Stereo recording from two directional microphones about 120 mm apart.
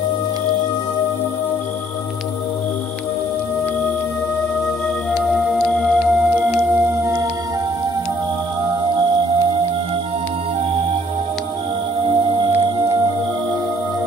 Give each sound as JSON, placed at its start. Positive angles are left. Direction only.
{"t": 5.3, "sound": "music", "side_deg": 0}
{"t": 6.5, "sound": "singing bowl", "side_deg": -15}